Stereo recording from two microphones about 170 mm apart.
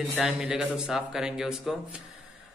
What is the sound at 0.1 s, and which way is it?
A man's voice, 5° right (ahead or behind).